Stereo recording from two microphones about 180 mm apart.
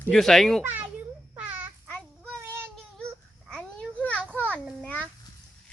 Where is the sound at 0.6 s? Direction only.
10° right (ahead or behind).